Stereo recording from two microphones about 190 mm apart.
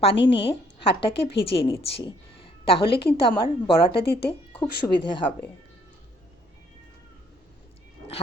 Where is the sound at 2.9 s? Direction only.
60° left (ahead or behind).